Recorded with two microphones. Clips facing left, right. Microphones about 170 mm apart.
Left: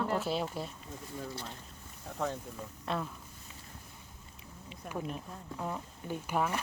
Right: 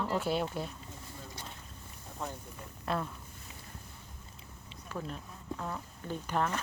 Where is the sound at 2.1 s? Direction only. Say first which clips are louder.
Left 6 dB; 80° left.